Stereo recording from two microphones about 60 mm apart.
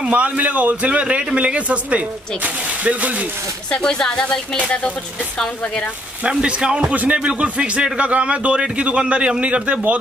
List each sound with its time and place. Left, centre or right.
0.1 s a man's voice: right
3.7 s speech: centre
6.2 s a man's voice: centre